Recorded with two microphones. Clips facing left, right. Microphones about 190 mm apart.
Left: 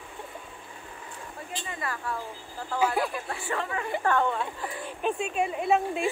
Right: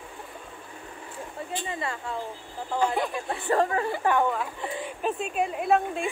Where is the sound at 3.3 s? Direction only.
35° right (ahead or behind).